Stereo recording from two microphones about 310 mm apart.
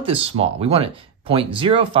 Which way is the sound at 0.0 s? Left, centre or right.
Centre.